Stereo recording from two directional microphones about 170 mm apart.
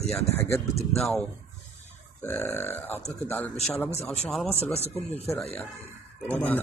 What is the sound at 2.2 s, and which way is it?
A man's voice, 15° left (ahead or behind).